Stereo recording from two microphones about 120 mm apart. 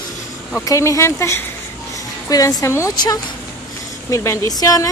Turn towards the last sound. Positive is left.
turn(degrees=30)  # may be behind; listen again after turning